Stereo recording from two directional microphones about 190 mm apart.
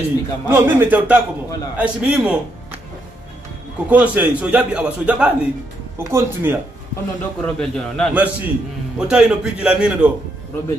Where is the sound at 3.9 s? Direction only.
10° right (ahead or behind).